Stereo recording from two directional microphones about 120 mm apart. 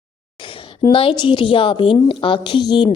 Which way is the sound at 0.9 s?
45° left (ahead or behind).